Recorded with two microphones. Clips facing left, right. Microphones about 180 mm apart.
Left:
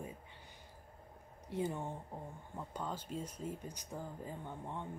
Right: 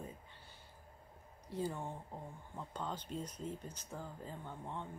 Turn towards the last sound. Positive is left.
turn(degrees=15)  # may be behind; listen again after turning